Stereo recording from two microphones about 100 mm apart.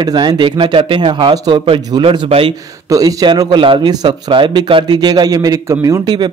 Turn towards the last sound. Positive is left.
turn(degrees=-35)  # may be behind; listen again after turning